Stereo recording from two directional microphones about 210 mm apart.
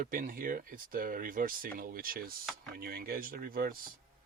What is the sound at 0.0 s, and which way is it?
Speech, 40° right (ahead or behind).